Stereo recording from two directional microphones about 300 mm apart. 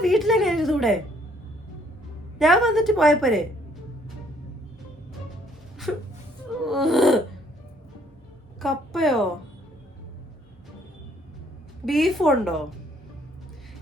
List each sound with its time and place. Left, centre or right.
0.0 s a woman's voice: centre
2.4 s a woman's voice: centre
5.9 s a woman's voice: centre
8.6 s a woman's voice: centre
11.9 s a woman's voice: centre